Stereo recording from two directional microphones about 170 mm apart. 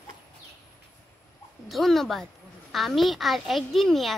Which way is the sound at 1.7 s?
Centre (ahead or behind).